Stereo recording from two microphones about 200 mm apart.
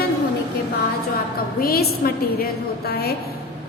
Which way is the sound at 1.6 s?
50° left (ahead or behind).